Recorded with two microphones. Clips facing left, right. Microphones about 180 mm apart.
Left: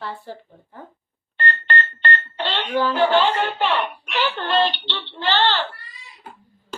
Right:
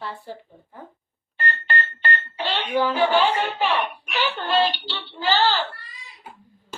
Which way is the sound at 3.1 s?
10° right (ahead or behind).